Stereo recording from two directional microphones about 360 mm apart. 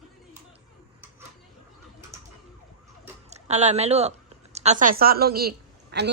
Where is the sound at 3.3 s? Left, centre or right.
Centre.